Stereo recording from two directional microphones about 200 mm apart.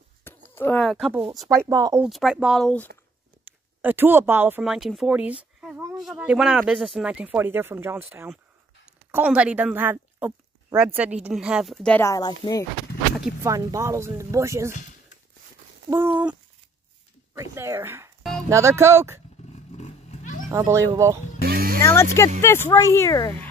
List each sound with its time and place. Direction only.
0.3 s a sound: 10° left (ahead or behind)
0.6 s speech: 5° left (ahead or behind)
1.5 s speech: 15° right (ahead or behind)
2.0 s speech: centre (ahead or behind)
3.4 s speech: 10° right (ahead or behind)
5.4 s a sound: 5° right (ahead or behind)
5.9 s speech: 5° right (ahead or behind); by 12.6 s 20° left (ahead or behind)
13.4 s speech: 15° right (ahead or behind)
15.9 s speech: 10° right (ahead or behind)
19.8 s roaring cats: 35° left (ahead or behind)
20.4 s speech: 15° right (ahead or behind)
21.4 s music: 50° right (ahead or behind)
21.8 s speech: 15° left (ahead or behind)